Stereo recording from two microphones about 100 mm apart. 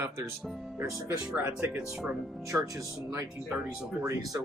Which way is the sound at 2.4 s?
35° right (ahead or behind).